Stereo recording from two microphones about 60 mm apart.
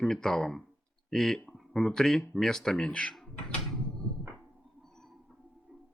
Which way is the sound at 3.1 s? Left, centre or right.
Centre.